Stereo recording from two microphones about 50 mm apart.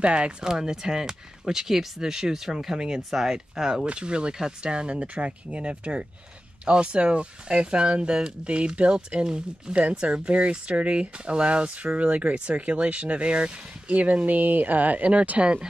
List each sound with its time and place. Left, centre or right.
0.0 s speech: right